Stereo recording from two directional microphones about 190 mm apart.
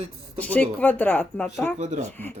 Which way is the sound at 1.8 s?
40° right (ahead or behind).